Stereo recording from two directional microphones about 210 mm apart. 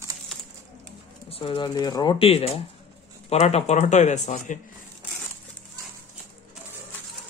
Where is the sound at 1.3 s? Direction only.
25° left (ahead or behind).